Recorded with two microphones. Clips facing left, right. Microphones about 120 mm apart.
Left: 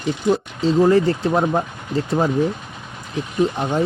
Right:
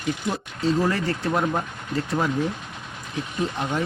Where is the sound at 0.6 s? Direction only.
25° left (ahead or behind).